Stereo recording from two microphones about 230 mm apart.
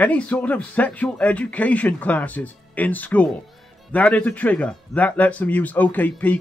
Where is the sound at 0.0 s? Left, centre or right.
Centre.